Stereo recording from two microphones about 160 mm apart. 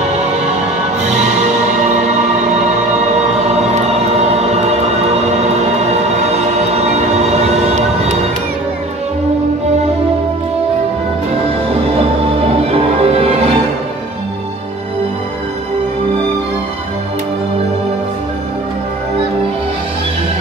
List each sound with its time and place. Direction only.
3.4 s music: 40° right (ahead or behind)
12.7 s music: 35° right (ahead or behind)